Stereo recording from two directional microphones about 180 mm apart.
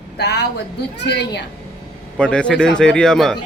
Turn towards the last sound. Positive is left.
turn(degrees=0)  # may be behind; listen again after turning